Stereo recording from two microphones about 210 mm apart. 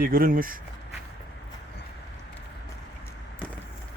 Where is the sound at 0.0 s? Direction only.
45° right (ahead or behind).